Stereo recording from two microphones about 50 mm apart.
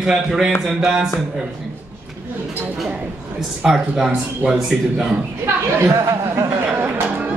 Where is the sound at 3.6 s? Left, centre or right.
Centre.